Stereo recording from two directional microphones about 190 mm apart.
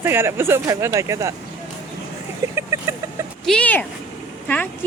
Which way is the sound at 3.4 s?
5° left (ahead or behind).